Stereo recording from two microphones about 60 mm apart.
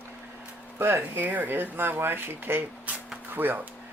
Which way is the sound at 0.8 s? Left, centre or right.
Right.